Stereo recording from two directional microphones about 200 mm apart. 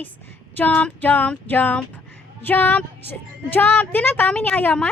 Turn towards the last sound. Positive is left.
turn(degrees=5)  # may be behind; listen again after turning